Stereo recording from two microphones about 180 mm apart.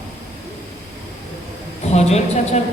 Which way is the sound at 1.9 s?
40° left (ahead or behind).